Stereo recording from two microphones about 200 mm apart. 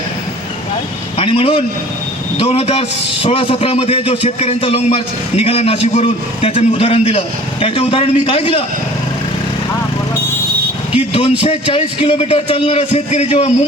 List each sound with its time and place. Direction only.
1.2 s a man's voice: 30° left (ahead or behind)
10.9 s a man's voice: 30° left (ahead or behind)